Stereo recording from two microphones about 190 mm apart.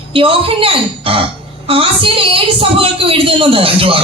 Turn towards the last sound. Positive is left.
turn(degrees=-30)  # may be behind; listen again after turning